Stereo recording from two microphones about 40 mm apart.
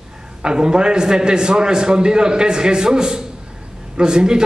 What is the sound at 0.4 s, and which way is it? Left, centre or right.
A man's voice, right.